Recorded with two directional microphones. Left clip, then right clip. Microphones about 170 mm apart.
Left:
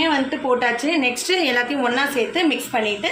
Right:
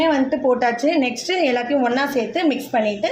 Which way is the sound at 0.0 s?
50° right (ahead or behind).